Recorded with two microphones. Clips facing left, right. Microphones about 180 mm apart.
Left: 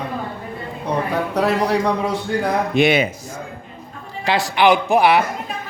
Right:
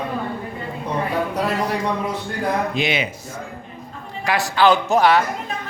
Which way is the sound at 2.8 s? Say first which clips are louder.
Left 7 dB; 60° left (ahead or behind).